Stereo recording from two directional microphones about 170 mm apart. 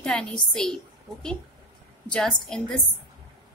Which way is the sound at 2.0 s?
5° left (ahead or behind).